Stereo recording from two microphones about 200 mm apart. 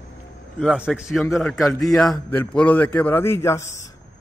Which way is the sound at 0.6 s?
Centre (ahead or behind).